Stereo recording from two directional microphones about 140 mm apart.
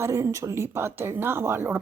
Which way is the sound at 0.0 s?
20° right (ahead or behind).